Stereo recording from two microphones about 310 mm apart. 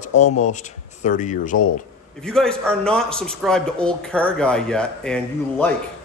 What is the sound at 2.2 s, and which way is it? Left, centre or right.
Speech, centre.